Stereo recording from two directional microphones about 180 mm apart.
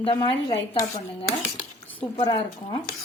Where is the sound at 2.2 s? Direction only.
25° left (ahead or behind).